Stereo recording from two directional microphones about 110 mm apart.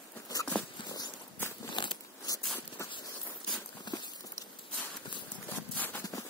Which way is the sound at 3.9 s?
40° left (ahead or behind).